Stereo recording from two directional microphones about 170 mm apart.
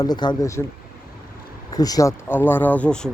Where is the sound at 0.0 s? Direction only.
25° left (ahead or behind).